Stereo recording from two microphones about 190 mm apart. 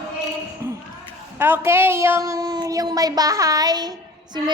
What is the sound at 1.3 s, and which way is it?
A woman's voice, 10° right (ahead or behind).